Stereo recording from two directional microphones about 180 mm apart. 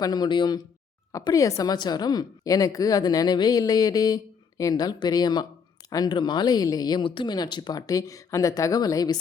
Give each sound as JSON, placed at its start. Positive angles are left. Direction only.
{"t": 0.0, "sound": "a woman's voice", "side_deg": 20}